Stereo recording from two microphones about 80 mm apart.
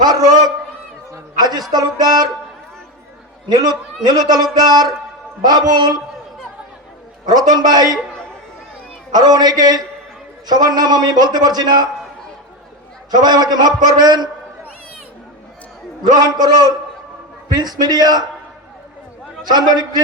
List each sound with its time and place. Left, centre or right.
0.0 s a man's voice: right
3.5 s a man's voice: right
7.3 s a man's voice: right
9.1 s a man's voice: right
13.1 s a man's voice: right
16.2 s a man's voice: right
19.5 s a man's voice: right